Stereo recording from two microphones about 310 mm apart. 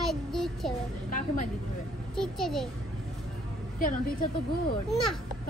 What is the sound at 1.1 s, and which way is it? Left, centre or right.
Speech, left.